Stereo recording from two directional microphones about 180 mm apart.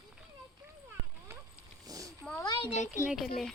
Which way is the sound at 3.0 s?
5° right (ahead or behind).